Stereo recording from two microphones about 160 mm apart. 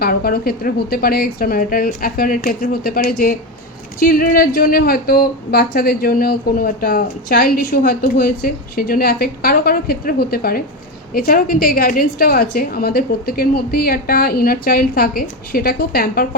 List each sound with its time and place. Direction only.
0.0 s a woman's voice: 70° left (ahead or behind)